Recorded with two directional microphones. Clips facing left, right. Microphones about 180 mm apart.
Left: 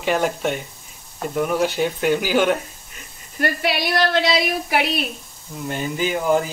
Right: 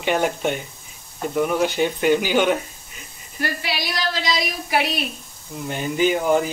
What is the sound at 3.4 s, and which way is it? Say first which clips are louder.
A woman's voice: left 5 dB; 55° left (ahead or behind).